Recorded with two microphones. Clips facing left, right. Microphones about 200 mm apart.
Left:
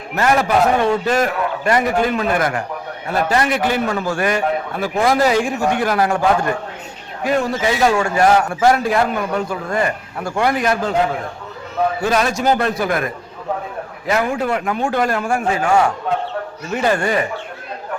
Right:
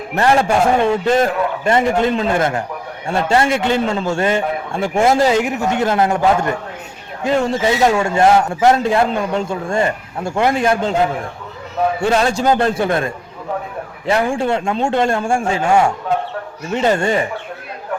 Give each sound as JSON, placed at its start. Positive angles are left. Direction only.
{"t": 0.2, "sound": "speech", "side_deg": -30}
{"t": 11.9, "sound": "speech", "side_deg": -30}